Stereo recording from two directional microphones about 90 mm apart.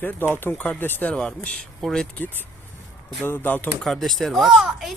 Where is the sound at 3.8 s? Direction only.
5° left (ahead or behind).